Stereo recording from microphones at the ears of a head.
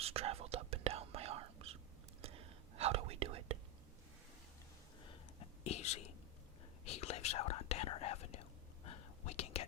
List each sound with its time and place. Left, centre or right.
0.0 s whispering: right
5.0 s a sound: left
6.8 s whispering: left